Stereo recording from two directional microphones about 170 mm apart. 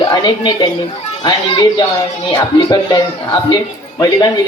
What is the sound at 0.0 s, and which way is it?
Speech, 25° left (ahead or behind).